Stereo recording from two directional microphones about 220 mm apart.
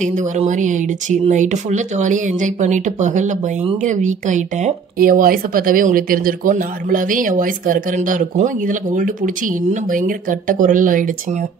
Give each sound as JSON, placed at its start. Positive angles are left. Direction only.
{"t": 0.0, "sound": "speech", "side_deg": -35}